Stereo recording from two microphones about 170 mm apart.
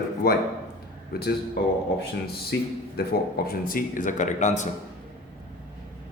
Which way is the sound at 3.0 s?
65° left (ahead or behind).